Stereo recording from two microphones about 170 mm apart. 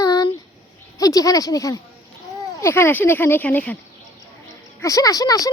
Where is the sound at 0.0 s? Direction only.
20° left (ahead or behind).